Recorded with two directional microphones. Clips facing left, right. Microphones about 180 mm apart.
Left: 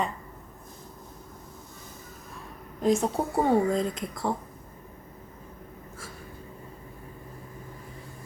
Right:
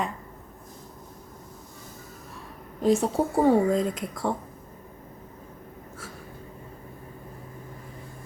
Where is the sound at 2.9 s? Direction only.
5° right (ahead or behind).